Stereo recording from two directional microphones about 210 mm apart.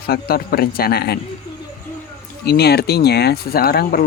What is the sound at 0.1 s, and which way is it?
Speech, 45° left (ahead or behind).